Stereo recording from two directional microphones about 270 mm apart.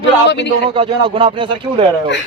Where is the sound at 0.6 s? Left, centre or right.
Centre.